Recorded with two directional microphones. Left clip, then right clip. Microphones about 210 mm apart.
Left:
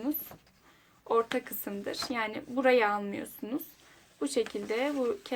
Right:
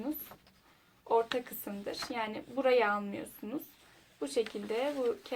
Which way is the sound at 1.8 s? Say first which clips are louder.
Left 3 dB; 50° left (ahead or behind).